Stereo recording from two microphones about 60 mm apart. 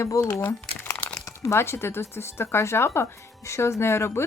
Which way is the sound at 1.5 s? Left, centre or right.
Left.